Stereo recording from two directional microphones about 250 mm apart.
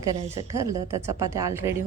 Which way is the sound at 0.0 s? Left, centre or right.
Centre.